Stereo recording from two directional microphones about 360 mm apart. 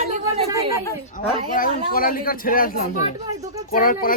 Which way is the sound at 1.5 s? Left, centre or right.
Left.